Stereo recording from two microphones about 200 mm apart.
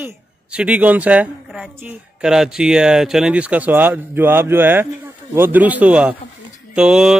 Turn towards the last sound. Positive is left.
turn(degrees=-5)  # may be behind; listen again after turning